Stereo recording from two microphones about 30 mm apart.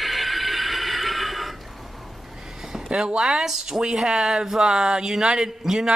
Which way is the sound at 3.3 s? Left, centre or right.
Centre.